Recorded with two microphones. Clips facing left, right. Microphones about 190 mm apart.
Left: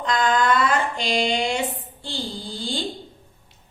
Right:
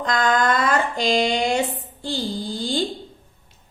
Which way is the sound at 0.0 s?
45° right (ahead or behind).